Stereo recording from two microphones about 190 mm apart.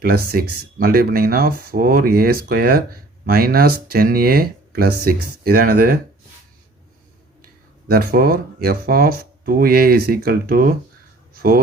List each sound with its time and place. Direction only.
0.0 s speech: 55° right (ahead or behind)
7.4 s speech: 50° right (ahead or behind)